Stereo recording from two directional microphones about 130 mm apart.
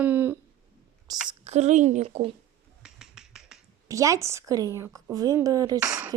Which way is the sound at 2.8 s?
5° right (ahead or behind).